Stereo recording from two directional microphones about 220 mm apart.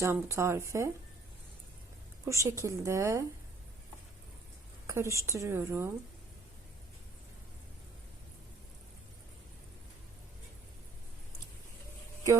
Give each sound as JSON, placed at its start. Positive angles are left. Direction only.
{"t": 0.0, "sound": "speech", "side_deg": -10}
{"t": 2.2, "sound": "speech", "side_deg": -15}
{"t": 4.9, "sound": "speech", "side_deg": -15}